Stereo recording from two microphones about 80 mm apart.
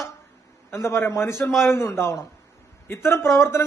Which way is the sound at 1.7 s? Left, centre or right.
Left.